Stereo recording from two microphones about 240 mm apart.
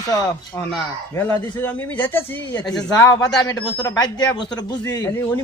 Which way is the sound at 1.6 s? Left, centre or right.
Centre.